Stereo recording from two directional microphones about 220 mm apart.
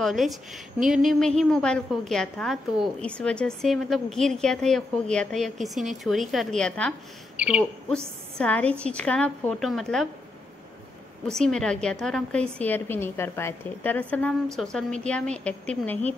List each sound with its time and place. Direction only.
0.0 s a woman's voice: centre (ahead or behind)
11.2 s a woman's voice: centre (ahead or behind)